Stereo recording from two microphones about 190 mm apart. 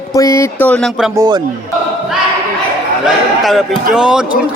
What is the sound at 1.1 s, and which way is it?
Speech, 20° right (ahead or behind).